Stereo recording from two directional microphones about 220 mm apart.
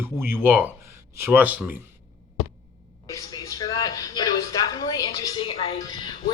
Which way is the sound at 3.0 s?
15° left (ahead or behind).